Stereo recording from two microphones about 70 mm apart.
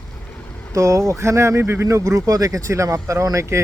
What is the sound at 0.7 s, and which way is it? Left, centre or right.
Speech, right.